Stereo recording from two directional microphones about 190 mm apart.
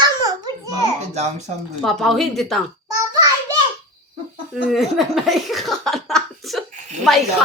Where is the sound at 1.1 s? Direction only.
35° right (ahead or behind).